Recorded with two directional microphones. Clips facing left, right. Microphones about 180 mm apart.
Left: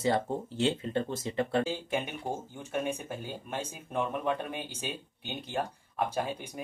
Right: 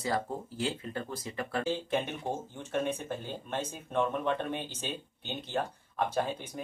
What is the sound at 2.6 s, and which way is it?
Speech, 10° left (ahead or behind).